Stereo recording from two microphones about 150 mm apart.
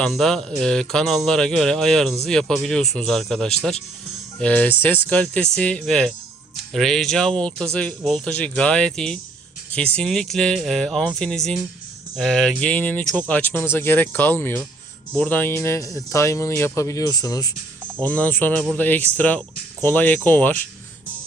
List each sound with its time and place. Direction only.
0.0 s speech: centre (ahead or behind); by 17.5 s 25° left (ahead or behind)
18.0 s speech: 10° left (ahead or behind)